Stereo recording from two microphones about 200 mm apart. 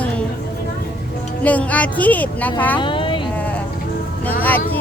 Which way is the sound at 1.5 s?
5° left (ahead or behind).